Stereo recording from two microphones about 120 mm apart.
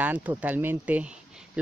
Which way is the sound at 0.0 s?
15° right (ahead or behind).